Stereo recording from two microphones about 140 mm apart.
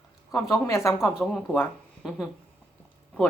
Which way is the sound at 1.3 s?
10° left (ahead or behind).